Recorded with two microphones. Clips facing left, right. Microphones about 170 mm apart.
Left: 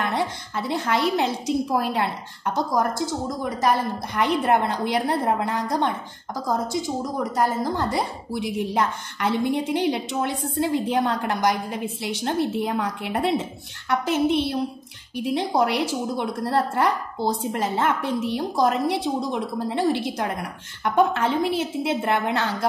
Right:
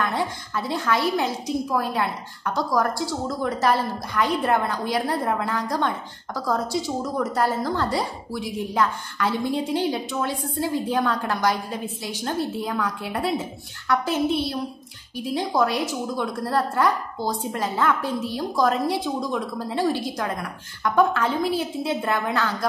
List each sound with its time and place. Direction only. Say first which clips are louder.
0.1 s a woman's voice: left 1 dB; 25° left (ahead or behind)